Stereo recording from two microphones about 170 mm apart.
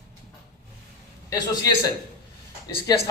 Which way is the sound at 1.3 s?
20° left (ahead or behind).